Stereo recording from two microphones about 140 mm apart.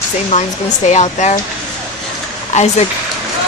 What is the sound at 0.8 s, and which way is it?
Speech, 55° left (ahead or behind).